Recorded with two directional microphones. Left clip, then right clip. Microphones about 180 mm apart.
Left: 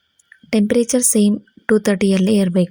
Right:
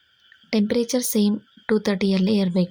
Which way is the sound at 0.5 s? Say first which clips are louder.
Left 6 dB; 25° left (ahead or behind).